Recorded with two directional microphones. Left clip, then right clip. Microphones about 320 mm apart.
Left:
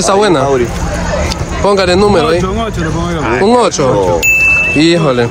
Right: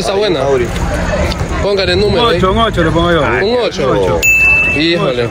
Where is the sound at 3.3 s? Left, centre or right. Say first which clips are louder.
Left 3 dB; left.